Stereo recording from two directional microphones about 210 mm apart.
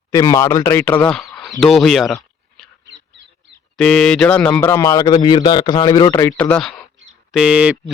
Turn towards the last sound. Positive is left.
turn(degrees=-5)  # may be behind; listen again after turning